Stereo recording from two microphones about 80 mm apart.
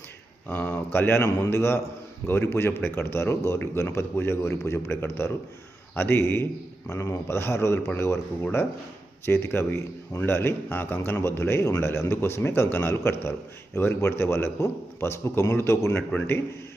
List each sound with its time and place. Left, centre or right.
0.5 s a man's voice: left